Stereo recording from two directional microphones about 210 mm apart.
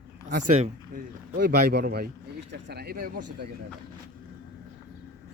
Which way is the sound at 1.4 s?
50° right (ahead or behind).